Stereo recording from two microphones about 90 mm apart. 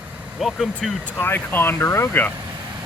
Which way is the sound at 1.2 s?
25° left (ahead or behind).